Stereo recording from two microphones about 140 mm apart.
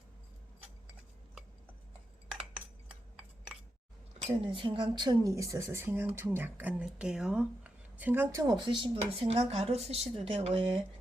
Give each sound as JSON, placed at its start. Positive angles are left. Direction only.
{"t": 4.2, "sound": "speech", "side_deg": -40}
{"t": 9.0, "sound": "speech", "side_deg": -45}